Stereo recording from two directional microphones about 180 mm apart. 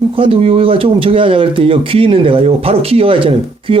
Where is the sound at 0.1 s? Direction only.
30° right (ahead or behind).